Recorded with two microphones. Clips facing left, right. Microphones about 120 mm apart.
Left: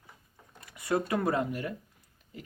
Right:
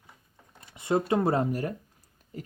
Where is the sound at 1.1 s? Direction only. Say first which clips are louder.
Right 4 dB; 30° right (ahead or behind).